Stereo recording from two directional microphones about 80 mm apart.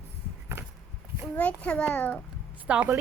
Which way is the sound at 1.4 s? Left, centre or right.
Centre.